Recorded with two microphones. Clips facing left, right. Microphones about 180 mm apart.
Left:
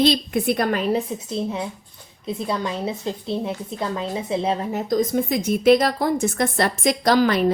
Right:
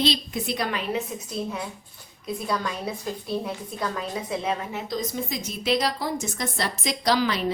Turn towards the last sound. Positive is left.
turn(degrees=50)  # may be behind; listen again after turning